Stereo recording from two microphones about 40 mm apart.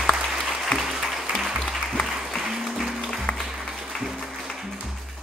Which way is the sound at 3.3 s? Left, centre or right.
Left.